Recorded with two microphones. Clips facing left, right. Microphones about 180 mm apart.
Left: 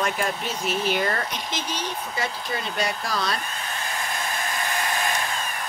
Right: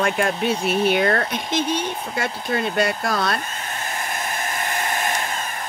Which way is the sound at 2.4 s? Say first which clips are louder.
Right 6 dB; 55° right (ahead or behind).